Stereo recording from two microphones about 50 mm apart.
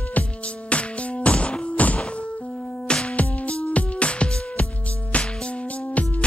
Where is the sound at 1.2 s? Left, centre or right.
Left.